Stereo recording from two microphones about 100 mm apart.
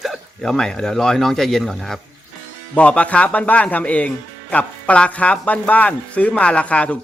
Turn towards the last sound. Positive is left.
turn(degrees=10)  # may be behind; listen again after turning